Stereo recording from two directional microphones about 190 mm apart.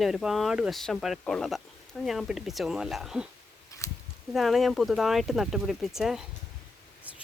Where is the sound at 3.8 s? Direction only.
15° left (ahead or behind).